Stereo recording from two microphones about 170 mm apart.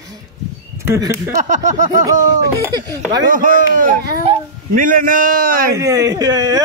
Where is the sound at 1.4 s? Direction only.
45° right (ahead or behind).